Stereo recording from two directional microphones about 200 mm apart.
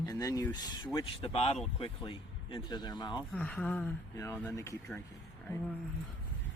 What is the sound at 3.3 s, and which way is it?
Speech, 5° left (ahead or behind).